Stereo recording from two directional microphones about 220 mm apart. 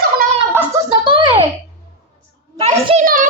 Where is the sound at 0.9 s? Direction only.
20° right (ahead or behind).